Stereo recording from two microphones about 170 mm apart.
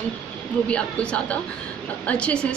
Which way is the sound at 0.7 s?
5° left (ahead or behind).